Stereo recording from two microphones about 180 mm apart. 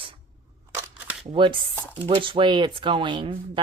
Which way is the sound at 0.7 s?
10° right (ahead or behind).